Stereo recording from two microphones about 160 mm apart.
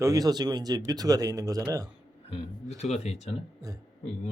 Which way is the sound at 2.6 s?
45° left (ahead or behind).